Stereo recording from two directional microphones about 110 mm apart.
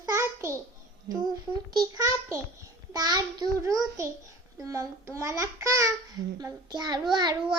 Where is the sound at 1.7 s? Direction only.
35° right (ahead or behind).